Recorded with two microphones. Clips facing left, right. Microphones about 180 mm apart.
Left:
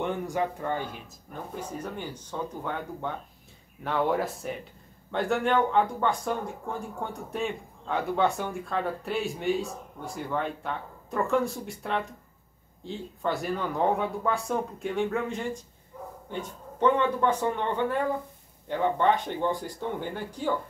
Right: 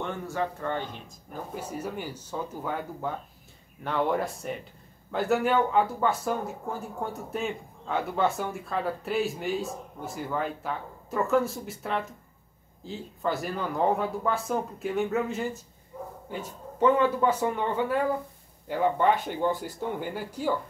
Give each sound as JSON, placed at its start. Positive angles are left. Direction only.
{"t": 0.0, "sound": "speech", "side_deg": 15}
{"t": 1.3, "sound": "speech", "side_deg": -5}
{"t": 15.9, "sound": "bow-wow", "side_deg": -25}
{"t": 16.3, "sound": "speech", "side_deg": -5}